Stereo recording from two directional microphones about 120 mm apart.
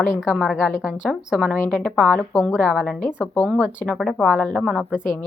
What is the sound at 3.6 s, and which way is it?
Speech, 10° right (ahead or behind).